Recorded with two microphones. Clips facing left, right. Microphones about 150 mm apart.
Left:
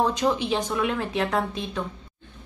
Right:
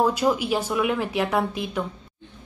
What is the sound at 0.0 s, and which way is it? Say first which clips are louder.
A woman's voice: right 2 dB; 10° right (ahead or behind).